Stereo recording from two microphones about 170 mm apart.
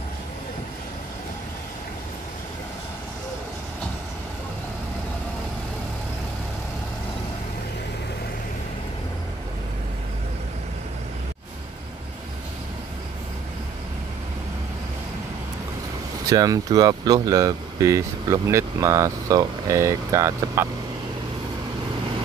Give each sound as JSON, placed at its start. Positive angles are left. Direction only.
{"t": 16.3, "sound": "speech", "side_deg": -20}